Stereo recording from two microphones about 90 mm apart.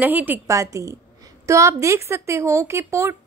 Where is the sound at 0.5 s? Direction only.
35° right (ahead or behind).